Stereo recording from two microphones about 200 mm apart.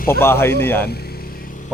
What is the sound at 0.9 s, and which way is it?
Vehicle, 50° left (ahead or behind).